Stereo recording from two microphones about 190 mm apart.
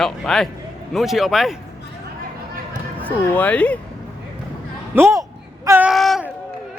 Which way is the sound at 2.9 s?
10° left (ahead or behind).